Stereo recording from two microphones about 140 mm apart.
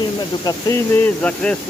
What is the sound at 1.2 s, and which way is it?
Speech, 10° left (ahead or behind).